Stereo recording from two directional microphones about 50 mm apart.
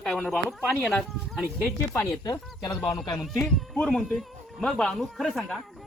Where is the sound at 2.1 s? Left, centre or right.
Left.